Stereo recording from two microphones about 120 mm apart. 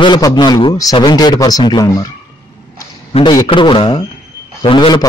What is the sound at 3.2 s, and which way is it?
Speech, 40° left (ahead or behind).